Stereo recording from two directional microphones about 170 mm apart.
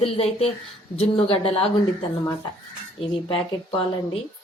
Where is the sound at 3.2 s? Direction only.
30° left (ahead or behind).